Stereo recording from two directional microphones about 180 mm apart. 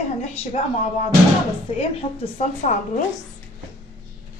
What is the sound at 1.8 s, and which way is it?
Speech, 35° left (ahead or behind).